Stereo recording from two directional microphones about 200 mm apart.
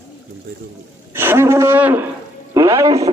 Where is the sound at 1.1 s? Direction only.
10° right (ahead or behind).